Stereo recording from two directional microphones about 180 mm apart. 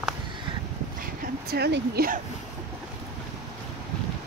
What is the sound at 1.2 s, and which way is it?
Speech, 65° right (ahead or behind).